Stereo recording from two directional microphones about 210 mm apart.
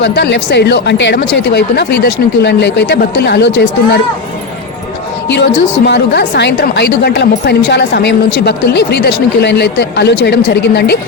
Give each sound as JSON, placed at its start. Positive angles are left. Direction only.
{"t": 0.0, "sound": "a woman's voice", "side_deg": 55}
{"t": 5.3, "sound": "a woman's voice", "side_deg": 55}